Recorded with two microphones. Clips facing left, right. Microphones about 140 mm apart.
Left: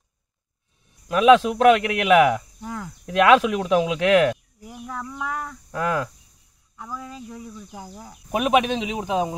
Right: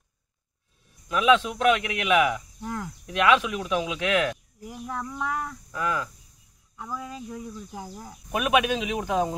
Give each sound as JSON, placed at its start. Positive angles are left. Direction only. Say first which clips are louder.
{"t": 1.1, "sound": "a man's voice", "louder": "left 6 dB", "side_deg": 35}
{"t": 2.6, "sound": "speech", "louder": "even", "side_deg": 0}
{"t": 3.1, "sound": "a man's voice", "louder": "left 6 dB", "side_deg": 40}
{"t": 4.6, "sound": "speech", "louder": "even", "side_deg": 0}
{"t": 5.7, "sound": "speech", "louder": "left 5 dB", "side_deg": 50}
{"t": 6.8, "sound": "speech", "louder": "even", "side_deg": -5}
{"t": 8.3, "sound": "speech", "louder": "left 3 dB", "side_deg": 25}